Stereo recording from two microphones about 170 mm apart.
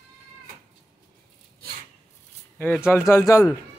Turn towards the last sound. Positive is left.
turn(degrees=20)  # may be behind; listen again after turning